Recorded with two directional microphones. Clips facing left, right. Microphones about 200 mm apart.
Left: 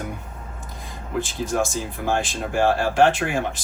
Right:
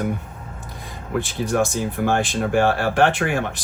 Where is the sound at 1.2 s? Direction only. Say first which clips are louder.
Right 2 dB; 60° right (ahead or behind).